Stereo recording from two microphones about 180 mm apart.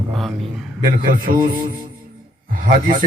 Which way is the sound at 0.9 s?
50° right (ahead or behind).